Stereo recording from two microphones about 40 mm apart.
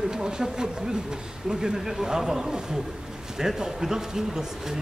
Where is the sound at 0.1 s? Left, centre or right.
Centre.